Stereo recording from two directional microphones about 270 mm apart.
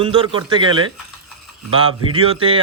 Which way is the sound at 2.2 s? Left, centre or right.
Centre.